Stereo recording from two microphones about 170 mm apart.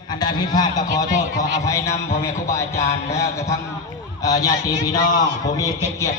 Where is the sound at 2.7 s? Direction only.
40° left (ahead or behind).